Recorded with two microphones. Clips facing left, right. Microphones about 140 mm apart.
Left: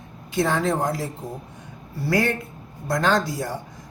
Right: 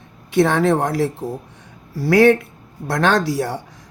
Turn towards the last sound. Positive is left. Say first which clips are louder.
# right 4 dB
turn(degrees=-75)  # may be behind; listen again after turning